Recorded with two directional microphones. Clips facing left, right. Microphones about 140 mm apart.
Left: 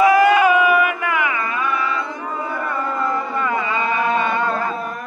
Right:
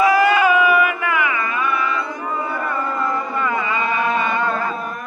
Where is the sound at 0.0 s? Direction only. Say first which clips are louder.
Left 2 dB; 50° left (ahead or behind).